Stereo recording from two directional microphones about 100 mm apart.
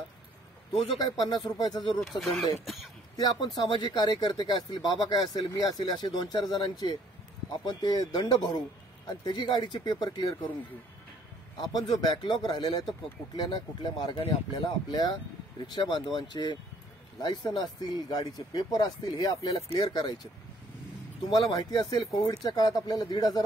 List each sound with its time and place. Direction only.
0.9 s speech: 40° left (ahead or behind)
2.0 s speech: centre (ahead or behind)
2.6 s throat clearing: centre (ahead or behind)
3.2 s speech: 45° left (ahead or behind)
11.5 s speech: 45° left (ahead or behind)
21.3 s speech: 40° left (ahead or behind)